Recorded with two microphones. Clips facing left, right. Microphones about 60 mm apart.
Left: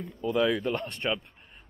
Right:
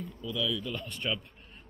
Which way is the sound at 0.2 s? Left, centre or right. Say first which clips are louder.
Left 8 dB; left.